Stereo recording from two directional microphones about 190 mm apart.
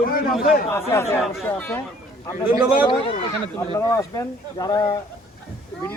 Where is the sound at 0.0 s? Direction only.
50° left (ahead or behind).